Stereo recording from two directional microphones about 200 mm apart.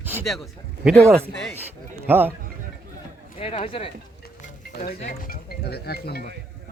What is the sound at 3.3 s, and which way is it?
Speech, 30° left (ahead or behind).